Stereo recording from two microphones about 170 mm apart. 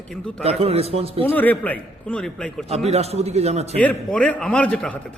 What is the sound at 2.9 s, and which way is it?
Speech, 40° right (ahead or behind).